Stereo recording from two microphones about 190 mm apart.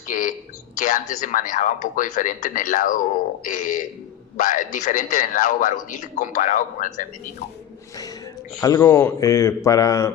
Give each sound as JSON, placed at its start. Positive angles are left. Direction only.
{"t": 0.1, "sound": "a sound", "side_deg": 45}
{"t": 0.8, "sound": "a man's voice", "side_deg": 45}
{"t": 8.6, "sound": "speech", "side_deg": 20}